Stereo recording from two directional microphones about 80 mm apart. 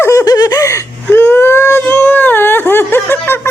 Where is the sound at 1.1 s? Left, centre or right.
Left.